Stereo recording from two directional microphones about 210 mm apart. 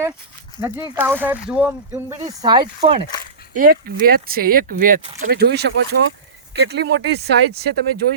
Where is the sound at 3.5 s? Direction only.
40° right (ahead or behind).